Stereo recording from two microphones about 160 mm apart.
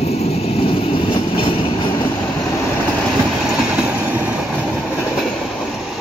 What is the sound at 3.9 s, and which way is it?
Vehicle, 10° right (ahead or behind).